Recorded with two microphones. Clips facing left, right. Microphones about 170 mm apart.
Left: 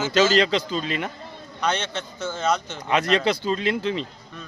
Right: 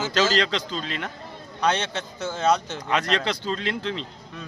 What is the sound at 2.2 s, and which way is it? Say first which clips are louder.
Speech: right 2 dB; 35° right (ahead or behind).